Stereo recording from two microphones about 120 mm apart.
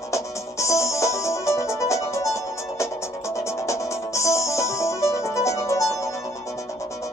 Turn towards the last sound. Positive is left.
turn(degrees=25)  # may be behind; listen again after turning